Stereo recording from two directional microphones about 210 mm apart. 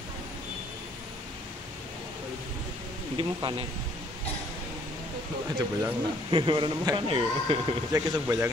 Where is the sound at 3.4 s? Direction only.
25° right (ahead or behind).